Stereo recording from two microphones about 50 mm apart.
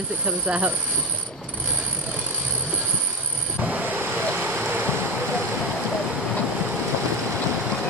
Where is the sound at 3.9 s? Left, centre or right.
Right.